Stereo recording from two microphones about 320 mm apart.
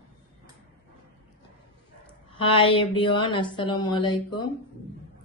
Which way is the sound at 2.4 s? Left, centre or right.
Centre.